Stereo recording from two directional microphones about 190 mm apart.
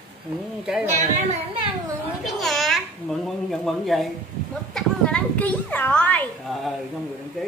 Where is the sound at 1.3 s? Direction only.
30° right (ahead or behind).